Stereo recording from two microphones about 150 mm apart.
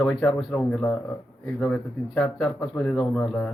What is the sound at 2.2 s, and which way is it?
A man's voice, 5° left (ahead or behind).